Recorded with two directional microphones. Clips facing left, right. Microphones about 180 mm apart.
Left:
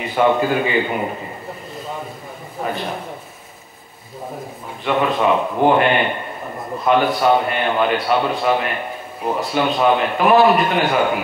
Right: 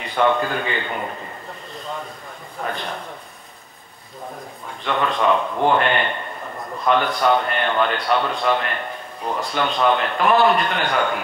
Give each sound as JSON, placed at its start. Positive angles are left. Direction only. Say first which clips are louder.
{"t": 0.0, "sound": "a man's voice", "louder": "left 3 dB", "side_deg": 5}
{"t": 2.6, "sound": "a man's voice", "louder": "left 3 dB", "side_deg": 10}
{"t": 4.8, "sound": "a man's voice", "louder": "left 4 dB", "side_deg": 20}
{"t": 5.1, "sound": "a man's voice", "louder": "left 2 dB", "side_deg": 5}